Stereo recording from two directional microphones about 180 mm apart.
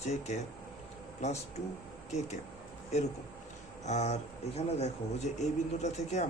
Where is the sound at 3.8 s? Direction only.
40° left (ahead or behind).